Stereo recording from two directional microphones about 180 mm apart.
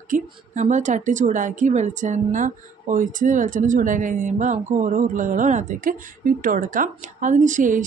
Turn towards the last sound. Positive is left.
turn(degrees=-45)  # may be behind; listen again after turning